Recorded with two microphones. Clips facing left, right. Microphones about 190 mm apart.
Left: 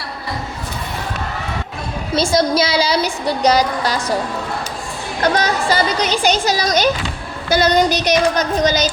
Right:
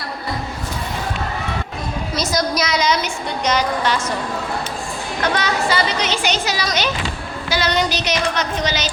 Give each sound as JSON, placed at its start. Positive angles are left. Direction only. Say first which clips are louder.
{"t": 2.1, "sound": "a woman's voice", "louder": "left 6 dB", "side_deg": 30}
{"t": 5.2, "sound": "a woman's voice", "louder": "left 3 dB", "side_deg": 40}
{"t": 7.5, "sound": "a sound", "louder": "left 6 dB", "side_deg": 45}